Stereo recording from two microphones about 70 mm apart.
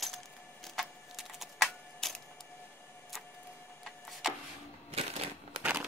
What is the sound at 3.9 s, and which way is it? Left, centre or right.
Vehicle, centre.